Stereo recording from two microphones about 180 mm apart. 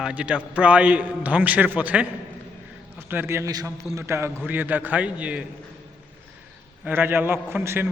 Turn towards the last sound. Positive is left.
turn(degrees=-15)  # may be behind; listen again after turning